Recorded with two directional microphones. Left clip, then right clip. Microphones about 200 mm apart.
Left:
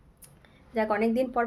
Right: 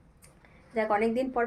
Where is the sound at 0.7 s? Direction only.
20° left (ahead or behind).